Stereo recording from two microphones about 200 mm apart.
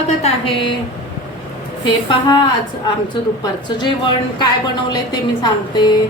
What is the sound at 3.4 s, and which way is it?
Speech, 25° left (ahead or behind).